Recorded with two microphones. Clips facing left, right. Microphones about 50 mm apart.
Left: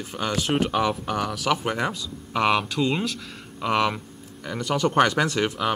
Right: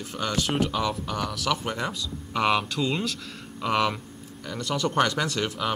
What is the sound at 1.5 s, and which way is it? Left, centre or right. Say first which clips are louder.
Speech: left 4 dB; left.